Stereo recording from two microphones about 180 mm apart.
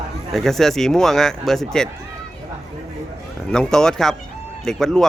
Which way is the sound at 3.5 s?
5° left (ahead or behind).